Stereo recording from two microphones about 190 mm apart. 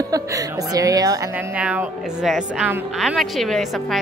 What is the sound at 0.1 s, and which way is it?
A woman's voice, 20° right (ahead or behind).